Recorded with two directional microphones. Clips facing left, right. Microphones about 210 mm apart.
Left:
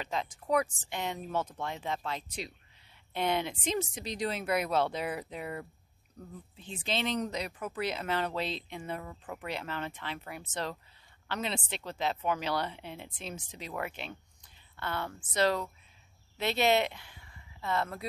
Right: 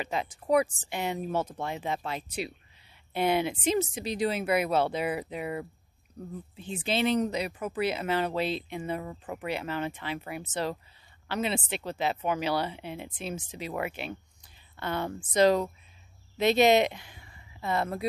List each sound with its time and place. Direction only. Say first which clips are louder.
0.0 s speech: right 3 dB; 10° right (ahead or behind)